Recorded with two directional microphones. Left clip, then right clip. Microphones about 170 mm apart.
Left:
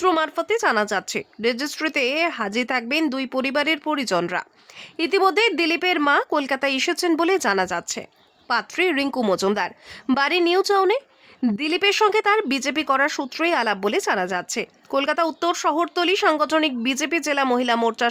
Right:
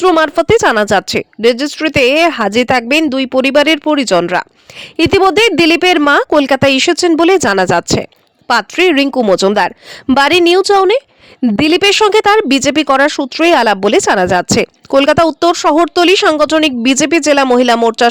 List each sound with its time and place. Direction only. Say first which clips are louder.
0.2 s a woman's voice: right 12 dB; 45° right (ahead or behind)
9.0 s speech: right 11 dB; 25° right (ahead or behind)
9.3 s a woman's voice: right 12 dB; 40° right (ahead or behind)